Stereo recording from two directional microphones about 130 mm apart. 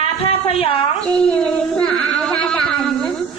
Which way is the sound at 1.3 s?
10° left (ahead or behind).